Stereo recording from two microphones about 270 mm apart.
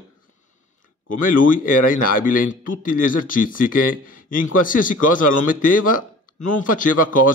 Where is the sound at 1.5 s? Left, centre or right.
Left.